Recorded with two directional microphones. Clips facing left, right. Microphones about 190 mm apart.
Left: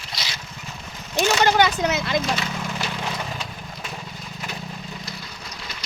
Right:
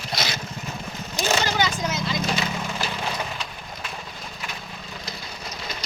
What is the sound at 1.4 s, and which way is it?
Speech, 60° left (ahead or behind).